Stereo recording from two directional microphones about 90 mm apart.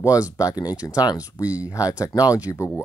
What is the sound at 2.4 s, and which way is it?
Speech, 35° left (ahead or behind).